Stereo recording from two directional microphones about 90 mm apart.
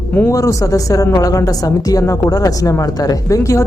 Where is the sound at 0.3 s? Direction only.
35° left (ahead or behind).